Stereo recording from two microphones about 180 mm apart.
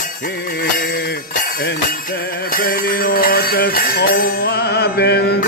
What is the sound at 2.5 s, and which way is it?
Music, 50° left (ahead or behind).